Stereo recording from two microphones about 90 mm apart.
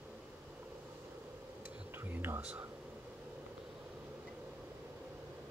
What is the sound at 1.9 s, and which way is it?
Whispering, 25° right (ahead or behind).